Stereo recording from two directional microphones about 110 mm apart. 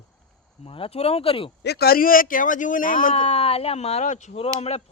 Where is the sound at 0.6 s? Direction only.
55° left (ahead or behind).